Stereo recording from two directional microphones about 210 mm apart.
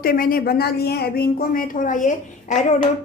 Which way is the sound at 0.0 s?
45° left (ahead or behind).